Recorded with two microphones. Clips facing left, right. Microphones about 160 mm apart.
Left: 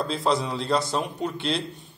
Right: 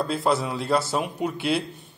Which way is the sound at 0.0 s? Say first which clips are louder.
Right 1 dB; 5° right (ahead or behind).